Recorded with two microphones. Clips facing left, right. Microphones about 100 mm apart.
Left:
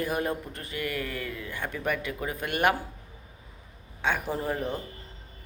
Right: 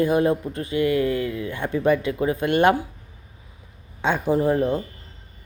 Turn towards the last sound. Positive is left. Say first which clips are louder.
# right 10 dB
turn(degrees=-20)  # may be behind; listen again after turning